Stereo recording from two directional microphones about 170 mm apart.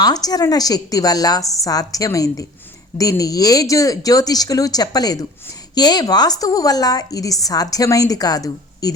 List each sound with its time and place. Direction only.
0.0 s a woman's voice: 20° left (ahead or behind)